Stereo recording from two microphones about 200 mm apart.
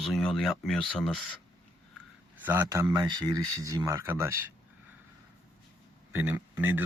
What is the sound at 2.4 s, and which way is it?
Speech, 10° right (ahead or behind).